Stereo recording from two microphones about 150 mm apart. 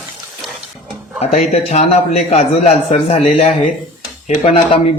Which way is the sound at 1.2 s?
45° left (ahead or behind).